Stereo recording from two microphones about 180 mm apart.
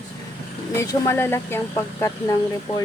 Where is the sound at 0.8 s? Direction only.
15° left (ahead or behind).